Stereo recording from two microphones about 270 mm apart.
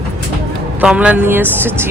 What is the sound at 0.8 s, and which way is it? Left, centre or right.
Speech, centre.